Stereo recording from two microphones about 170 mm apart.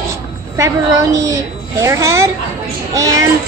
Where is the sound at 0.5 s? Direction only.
20° right (ahead or behind).